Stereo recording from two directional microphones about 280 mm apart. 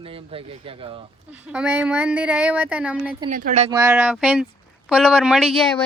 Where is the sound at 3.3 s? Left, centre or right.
Right.